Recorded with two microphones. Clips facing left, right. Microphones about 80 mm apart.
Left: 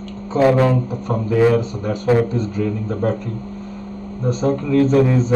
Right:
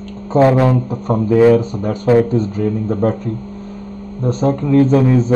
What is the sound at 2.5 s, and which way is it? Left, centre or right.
Speech, right.